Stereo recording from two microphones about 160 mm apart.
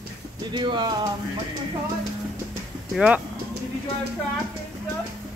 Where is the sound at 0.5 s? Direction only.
30° right (ahead or behind).